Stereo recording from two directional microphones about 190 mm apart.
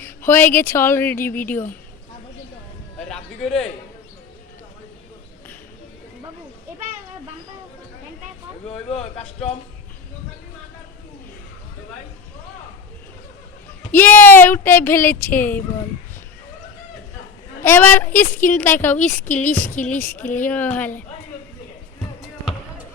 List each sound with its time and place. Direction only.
0.3 s speech: 10° left (ahead or behind)
3.1 s a man's voice: 5° left (ahead or behind)
8.9 s speech: 30° left (ahead or behind)
13.9 s speech: 10° left (ahead or behind)
17.6 s speech: 10° left (ahead or behind)